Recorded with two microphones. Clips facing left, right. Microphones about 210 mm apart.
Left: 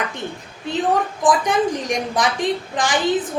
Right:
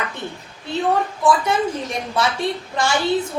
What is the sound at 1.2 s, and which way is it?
A woman's voice, 15° left (ahead or behind).